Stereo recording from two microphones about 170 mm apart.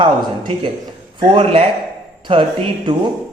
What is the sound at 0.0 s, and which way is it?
A man's voice, 30° right (ahead or behind).